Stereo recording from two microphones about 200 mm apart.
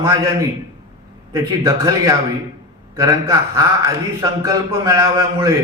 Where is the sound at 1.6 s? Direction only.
20° right (ahead or behind).